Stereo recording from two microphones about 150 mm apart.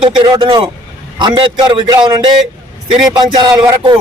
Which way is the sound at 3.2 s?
30° right (ahead or behind).